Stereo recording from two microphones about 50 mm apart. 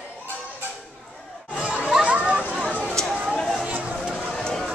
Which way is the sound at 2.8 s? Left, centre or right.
Centre.